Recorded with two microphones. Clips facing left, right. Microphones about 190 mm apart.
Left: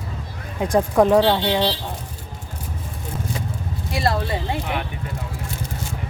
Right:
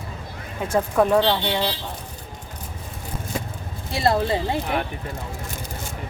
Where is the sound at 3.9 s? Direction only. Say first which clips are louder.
Right 2 dB; 25° right (ahead or behind).